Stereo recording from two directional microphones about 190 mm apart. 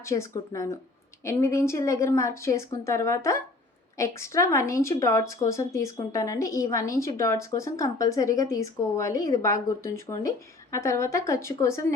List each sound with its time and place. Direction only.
0.0 s a woman's voice: 15° left (ahead or behind)